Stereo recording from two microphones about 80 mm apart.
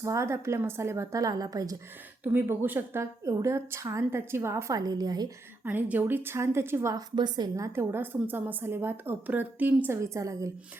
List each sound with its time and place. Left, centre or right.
0.0 s a woman's voice: right
2.2 s a woman's voice: right
4.8 s a woman's voice: right
5.6 s a woman's voice: right
7.2 s a woman's voice: right
7.8 s a woman's voice: right
10.0 s a woman's voice: right